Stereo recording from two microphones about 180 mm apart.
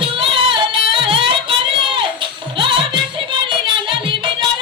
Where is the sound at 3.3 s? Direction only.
25° right (ahead or behind).